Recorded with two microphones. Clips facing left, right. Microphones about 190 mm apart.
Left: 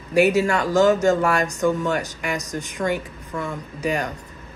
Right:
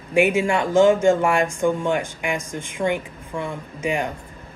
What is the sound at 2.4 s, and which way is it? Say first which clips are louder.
Speech: left 1 dB; 40° left (ahead or behind).